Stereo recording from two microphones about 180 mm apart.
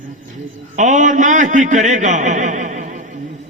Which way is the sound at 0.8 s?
45° right (ahead or behind).